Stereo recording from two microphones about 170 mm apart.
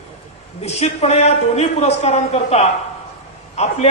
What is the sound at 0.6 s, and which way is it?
A man's voice, 40° left (ahead or behind).